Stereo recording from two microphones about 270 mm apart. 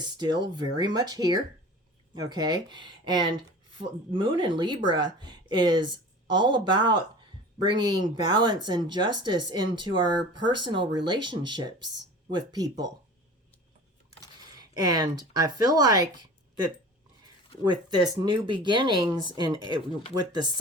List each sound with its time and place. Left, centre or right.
0.5 s speech: centre
14.6 s speech: centre
17.7 s speech: centre